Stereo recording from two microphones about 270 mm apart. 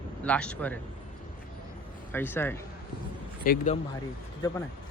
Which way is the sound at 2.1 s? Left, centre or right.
Centre.